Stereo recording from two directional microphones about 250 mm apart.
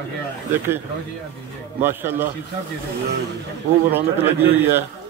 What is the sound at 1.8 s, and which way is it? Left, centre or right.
Speech, centre.